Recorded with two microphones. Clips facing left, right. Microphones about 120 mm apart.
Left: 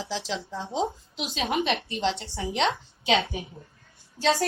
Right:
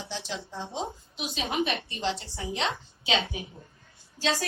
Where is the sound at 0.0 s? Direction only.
90° left.